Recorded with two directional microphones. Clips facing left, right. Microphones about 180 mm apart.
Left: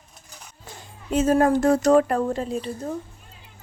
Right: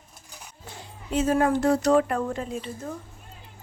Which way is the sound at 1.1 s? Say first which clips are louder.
Left 4 dB; 45° left (ahead or behind).